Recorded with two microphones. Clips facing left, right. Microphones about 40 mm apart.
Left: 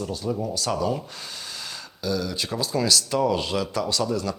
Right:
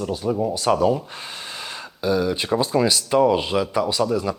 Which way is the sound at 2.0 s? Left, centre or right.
Right.